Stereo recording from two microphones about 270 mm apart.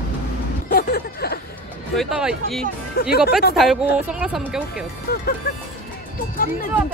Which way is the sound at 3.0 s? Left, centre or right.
Left.